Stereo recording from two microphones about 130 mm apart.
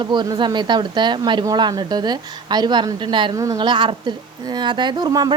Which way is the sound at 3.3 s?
25° right (ahead or behind).